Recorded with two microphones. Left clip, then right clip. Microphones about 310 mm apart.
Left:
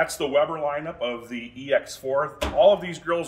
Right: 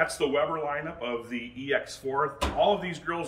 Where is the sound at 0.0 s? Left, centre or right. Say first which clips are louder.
Left 4 dB; left.